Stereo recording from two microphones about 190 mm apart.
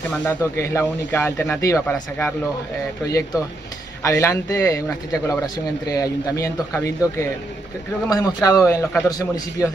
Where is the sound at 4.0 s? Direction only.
15° left (ahead or behind).